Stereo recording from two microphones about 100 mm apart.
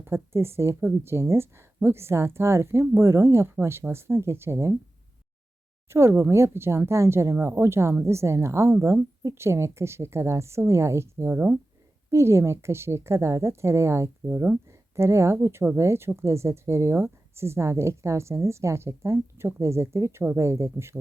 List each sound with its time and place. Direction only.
0.0 s a woman's voice: 25° right (ahead or behind)
5.9 s a woman's voice: 25° right (ahead or behind)